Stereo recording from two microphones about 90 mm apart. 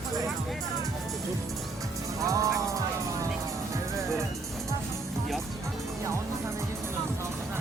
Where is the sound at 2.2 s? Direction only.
35° right (ahead or behind).